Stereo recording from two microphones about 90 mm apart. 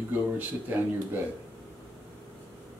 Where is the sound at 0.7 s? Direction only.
20° right (ahead or behind).